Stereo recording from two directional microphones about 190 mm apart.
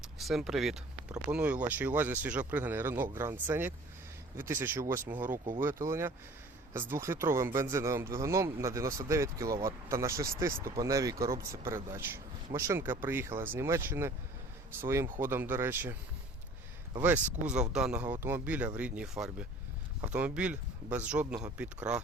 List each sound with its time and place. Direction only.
0.2 s speech: centre (ahead or behind)
17.0 s speech: 10° right (ahead or behind)